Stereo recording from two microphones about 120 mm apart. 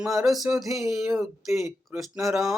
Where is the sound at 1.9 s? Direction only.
15° right (ahead or behind).